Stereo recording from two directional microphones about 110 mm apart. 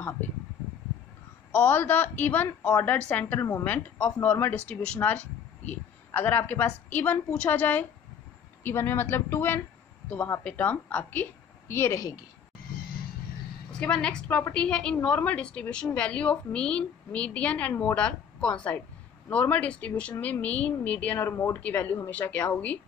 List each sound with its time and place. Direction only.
1.5 s a woman's voice: 15° left (ahead or behind)
13.7 s a woman's voice: 5° left (ahead or behind)